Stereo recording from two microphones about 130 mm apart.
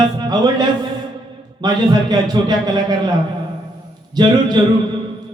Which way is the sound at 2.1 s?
30° right (ahead or behind).